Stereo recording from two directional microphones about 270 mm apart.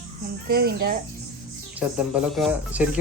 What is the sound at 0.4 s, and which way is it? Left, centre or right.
Speech, right.